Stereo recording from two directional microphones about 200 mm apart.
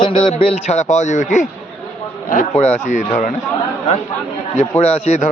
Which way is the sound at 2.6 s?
35° left (ahead or behind).